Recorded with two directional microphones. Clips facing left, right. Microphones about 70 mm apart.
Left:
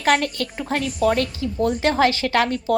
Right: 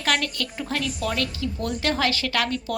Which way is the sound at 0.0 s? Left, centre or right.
Left.